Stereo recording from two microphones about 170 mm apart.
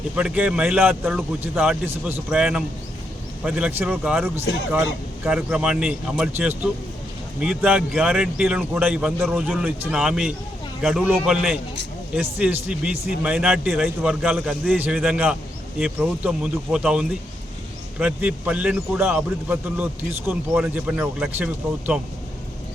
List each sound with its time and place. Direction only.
0.2 s a man's voice: 5° right (ahead or behind)